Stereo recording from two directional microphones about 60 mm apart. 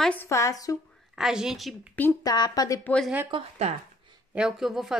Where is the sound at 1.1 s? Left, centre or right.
Centre.